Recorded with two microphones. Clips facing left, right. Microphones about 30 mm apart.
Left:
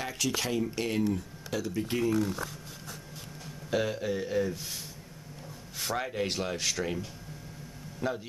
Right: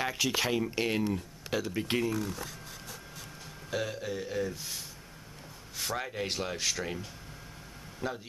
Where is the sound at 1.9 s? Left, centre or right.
Right.